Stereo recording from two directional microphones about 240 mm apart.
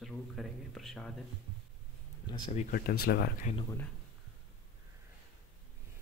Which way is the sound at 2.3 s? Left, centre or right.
Left.